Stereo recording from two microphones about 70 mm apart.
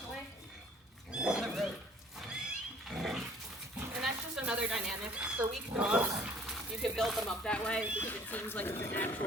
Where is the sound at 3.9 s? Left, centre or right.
Centre.